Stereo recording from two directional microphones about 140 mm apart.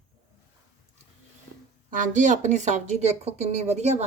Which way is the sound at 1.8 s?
70° right (ahead or behind).